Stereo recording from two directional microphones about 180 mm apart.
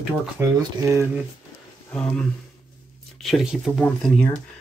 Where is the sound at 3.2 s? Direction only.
Centre (ahead or behind).